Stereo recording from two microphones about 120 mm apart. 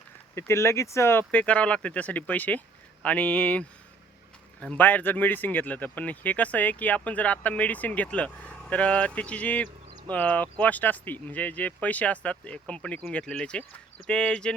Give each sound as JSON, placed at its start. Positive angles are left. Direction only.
{"t": 0.3, "sound": "speech", "side_deg": 20}
{"t": 1.3, "sound": "speech", "side_deg": 10}